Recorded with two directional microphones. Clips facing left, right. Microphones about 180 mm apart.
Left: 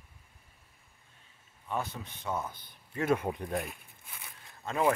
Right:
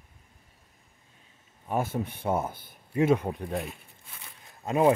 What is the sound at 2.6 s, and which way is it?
Speech, 15° right (ahead or behind).